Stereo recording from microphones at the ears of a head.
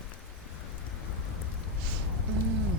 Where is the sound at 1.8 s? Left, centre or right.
Right.